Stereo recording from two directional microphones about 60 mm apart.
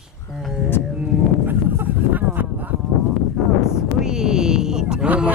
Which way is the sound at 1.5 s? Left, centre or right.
Right.